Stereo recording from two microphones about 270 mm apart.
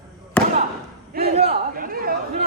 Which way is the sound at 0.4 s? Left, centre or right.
Centre.